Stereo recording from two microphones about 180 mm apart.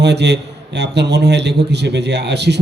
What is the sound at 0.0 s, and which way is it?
A man's voice, 70° right (ahead or behind).